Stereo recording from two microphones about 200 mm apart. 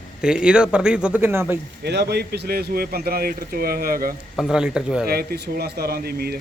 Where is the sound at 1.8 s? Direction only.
55° right (ahead or behind).